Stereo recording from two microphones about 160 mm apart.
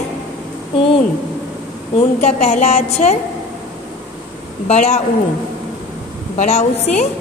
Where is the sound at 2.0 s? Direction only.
45° left (ahead or behind).